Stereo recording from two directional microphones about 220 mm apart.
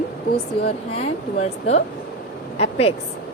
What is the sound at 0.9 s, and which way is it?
Speech, 30° left (ahead or behind).